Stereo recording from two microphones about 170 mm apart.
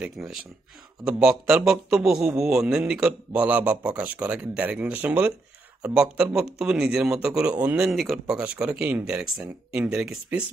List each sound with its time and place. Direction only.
0.0 s a man's voice: centre (ahead or behind)